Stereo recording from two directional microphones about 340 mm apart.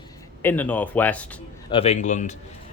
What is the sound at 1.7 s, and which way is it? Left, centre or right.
Speech, centre.